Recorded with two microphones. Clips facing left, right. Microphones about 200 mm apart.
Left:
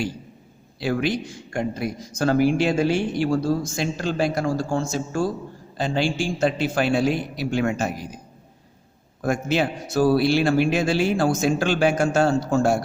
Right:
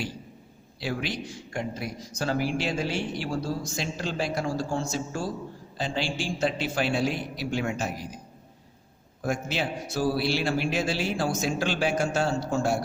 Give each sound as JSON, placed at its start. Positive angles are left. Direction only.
{"t": 0.8, "sound": "speech", "side_deg": 50}
{"t": 7.5, "sound": "speech", "side_deg": 60}
{"t": 9.3, "sound": "speech", "side_deg": 50}